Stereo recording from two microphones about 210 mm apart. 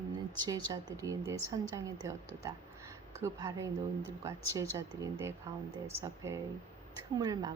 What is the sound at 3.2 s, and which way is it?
A woman's voice, 15° right (ahead or behind).